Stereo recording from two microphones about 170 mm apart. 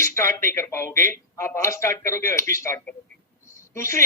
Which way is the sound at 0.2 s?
15° left (ahead or behind).